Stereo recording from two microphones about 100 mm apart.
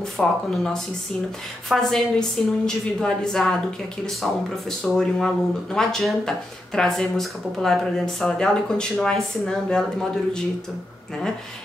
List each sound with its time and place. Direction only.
0.0 s speech: 5° left (ahead or behind)